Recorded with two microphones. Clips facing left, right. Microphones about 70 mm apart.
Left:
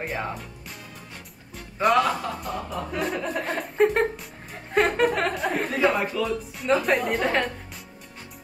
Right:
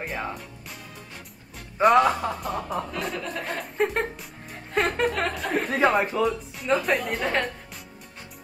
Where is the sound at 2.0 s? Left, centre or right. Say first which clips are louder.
Right 2 dB; centre.